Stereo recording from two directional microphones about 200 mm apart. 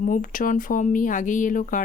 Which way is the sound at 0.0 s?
40° left (ahead or behind).